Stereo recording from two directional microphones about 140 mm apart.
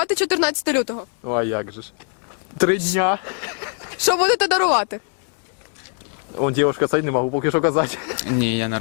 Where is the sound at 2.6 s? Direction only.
5° right (ahead or behind).